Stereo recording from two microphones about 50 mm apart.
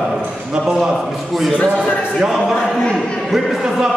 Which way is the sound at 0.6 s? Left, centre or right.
Centre.